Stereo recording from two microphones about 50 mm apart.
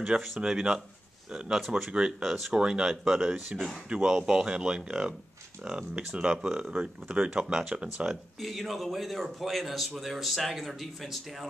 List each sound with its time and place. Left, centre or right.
0.4 s speech: centre
1.9 s speech: centre
3.9 s speech: centre
8.4 s speech: centre